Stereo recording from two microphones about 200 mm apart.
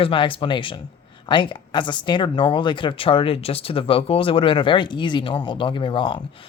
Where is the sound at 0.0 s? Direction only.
25° left (ahead or behind).